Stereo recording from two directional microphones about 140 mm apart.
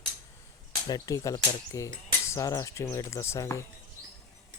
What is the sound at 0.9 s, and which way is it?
Speech, 25° left (ahead or behind).